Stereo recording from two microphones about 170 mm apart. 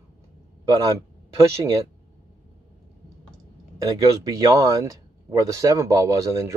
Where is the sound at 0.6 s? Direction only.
20° right (ahead or behind).